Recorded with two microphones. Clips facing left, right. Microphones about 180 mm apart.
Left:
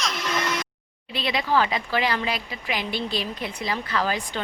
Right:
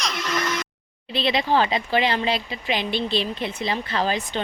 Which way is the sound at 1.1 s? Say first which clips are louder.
Right 3 dB; 25° right (ahead or behind).